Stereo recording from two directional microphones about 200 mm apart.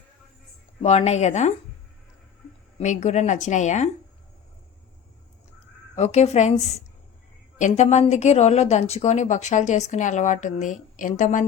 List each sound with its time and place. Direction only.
0.8 s a woman's voice: 30° left (ahead or behind)
2.7 s a woman's voice: 35° left (ahead or behind)
6.0 s a woman's voice: 35° left (ahead or behind)